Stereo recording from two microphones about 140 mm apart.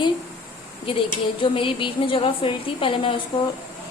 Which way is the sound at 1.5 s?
40° left (ahead or behind).